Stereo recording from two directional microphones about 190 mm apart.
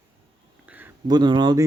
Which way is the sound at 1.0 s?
20° right (ahead or behind).